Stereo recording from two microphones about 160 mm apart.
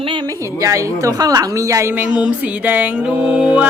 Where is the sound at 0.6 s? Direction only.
20° right (ahead or behind).